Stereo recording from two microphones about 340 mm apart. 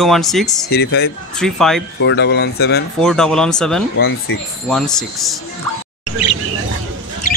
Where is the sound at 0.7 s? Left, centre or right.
Left.